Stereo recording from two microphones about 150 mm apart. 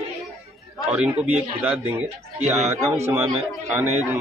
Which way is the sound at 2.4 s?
50° right (ahead or behind).